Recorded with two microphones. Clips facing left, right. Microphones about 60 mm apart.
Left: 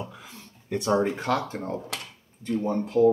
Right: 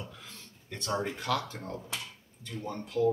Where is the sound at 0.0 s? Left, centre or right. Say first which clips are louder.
Left 7 dB; centre.